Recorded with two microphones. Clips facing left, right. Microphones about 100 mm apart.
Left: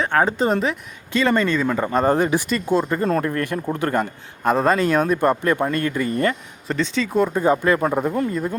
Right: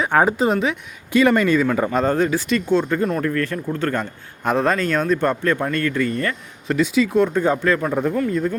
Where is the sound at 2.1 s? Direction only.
15° left (ahead or behind).